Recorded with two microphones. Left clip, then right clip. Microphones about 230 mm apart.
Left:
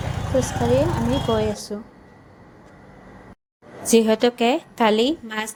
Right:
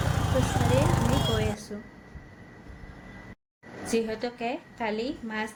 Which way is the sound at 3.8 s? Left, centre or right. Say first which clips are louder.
Left 12 dB; left.